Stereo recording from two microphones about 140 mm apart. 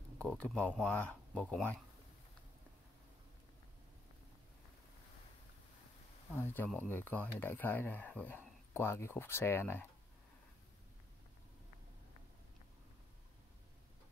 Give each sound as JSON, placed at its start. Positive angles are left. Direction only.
{"t": 0.2, "sound": "speech", "side_deg": 10}
{"t": 6.3, "sound": "speech", "side_deg": 15}